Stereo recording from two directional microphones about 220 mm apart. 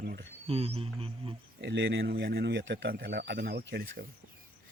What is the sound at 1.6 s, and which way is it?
Speech, 55° right (ahead or behind).